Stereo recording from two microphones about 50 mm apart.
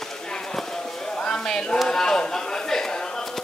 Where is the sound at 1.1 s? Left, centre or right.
Centre.